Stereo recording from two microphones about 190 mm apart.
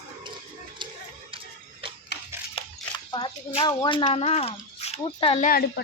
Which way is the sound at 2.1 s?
60° left (ahead or behind).